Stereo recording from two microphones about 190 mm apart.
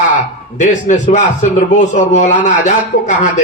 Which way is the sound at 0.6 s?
40° left (ahead or behind).